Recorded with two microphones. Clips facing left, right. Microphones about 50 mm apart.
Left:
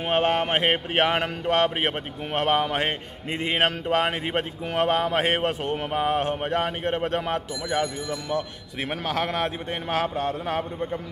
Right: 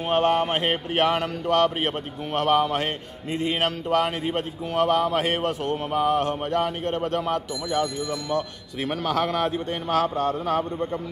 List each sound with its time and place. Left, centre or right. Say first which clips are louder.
0.1 s a man's voice: right 1 dB; left
8.8 s a man's voice: right 3 dB; centre